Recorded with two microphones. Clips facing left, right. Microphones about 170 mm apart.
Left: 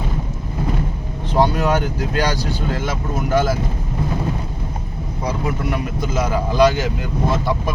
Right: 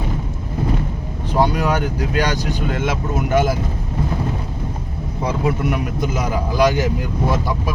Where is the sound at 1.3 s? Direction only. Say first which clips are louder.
Left 1 dB; 10° right (ahead or behind).